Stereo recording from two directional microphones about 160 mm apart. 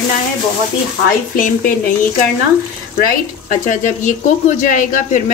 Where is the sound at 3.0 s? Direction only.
55° left (ahead or behind).